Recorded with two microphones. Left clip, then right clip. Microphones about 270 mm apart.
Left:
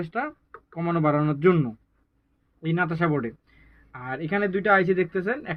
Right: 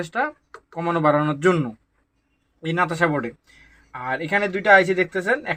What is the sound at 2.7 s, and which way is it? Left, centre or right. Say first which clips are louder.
Speech: right 4 dB; centre.